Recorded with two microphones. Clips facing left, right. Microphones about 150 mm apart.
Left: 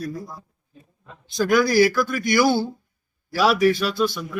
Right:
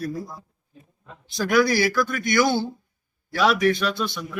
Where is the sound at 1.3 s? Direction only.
Centre (ahead or behind).